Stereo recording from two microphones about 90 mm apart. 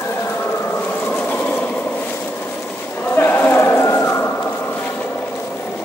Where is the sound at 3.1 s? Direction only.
20° left (ahead or behind).